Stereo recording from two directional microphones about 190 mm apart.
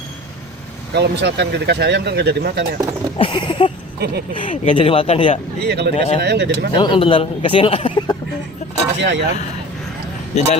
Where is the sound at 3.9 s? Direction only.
55° right (ahead or behind).